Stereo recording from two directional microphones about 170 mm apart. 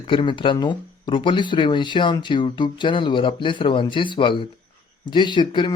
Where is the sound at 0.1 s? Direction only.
30° left (ahead or behind).